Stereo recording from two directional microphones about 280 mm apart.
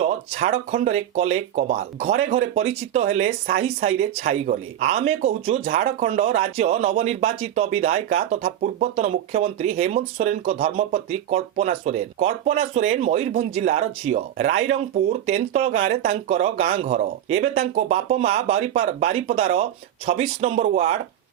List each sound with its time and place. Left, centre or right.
0.0 s speech: right